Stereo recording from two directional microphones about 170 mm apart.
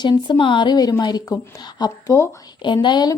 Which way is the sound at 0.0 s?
25° left (ahead or behind).